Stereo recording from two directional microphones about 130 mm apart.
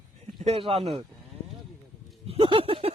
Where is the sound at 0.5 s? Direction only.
45° right (ahead or behind).